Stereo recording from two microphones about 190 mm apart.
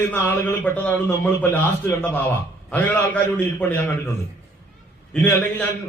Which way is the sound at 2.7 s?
10° left (ahead or behind).